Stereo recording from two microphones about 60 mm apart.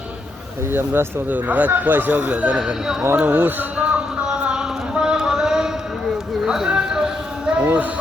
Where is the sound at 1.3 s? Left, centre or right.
Right.